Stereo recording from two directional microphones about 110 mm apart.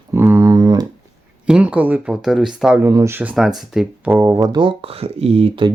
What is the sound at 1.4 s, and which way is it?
Speech, 10° right (ahead or behind).